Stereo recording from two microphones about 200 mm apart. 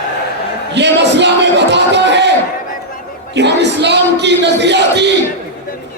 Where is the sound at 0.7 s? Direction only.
60° right (ahead or behind).